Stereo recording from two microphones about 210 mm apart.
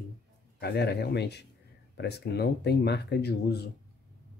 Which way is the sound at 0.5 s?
50° left (ahead or behind).